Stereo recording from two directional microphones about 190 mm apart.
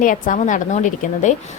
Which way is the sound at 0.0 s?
45° left (ahead or behind).